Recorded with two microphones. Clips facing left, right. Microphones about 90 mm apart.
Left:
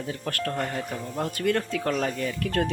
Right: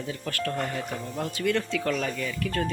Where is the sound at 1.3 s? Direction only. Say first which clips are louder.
Even; 45° left (ahead or behind).